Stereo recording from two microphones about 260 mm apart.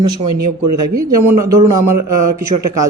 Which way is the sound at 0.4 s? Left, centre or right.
Right.